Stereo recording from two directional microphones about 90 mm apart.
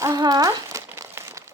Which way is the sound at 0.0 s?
45° right (ahead or behind).